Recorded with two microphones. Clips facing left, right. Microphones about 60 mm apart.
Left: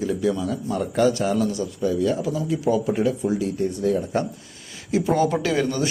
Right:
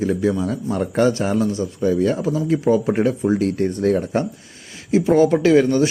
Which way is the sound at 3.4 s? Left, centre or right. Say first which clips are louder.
Right 4 dB; right.